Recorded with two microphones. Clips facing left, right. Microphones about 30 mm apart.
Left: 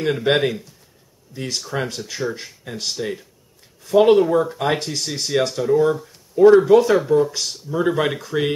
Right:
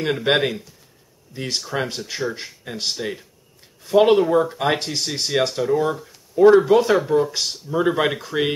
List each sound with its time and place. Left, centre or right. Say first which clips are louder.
0.0 s speech: left 1 dB; centre